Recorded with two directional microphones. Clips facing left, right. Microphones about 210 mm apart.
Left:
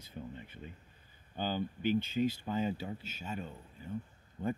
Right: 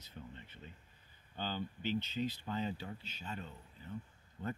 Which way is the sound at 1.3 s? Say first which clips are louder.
Left 5 dB; 10° left (ahead or behind).